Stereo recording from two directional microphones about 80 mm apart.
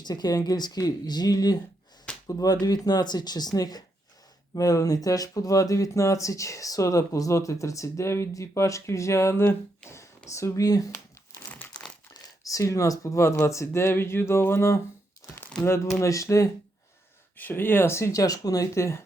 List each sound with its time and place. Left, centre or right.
0.0 s speech: left
12.1 s speech: left
17.3 s speech: left